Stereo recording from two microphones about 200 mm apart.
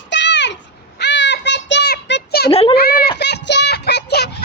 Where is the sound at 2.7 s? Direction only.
50° left (ahead or behind).